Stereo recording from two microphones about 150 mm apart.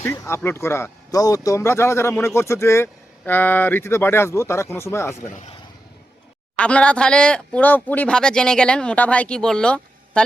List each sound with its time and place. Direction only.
0.0 s speech: 15° left (ahead or behind)
5.3 s a man's voice: 50° left (ahead or behind)
6.6 s speech: 5° left (ahead or behind)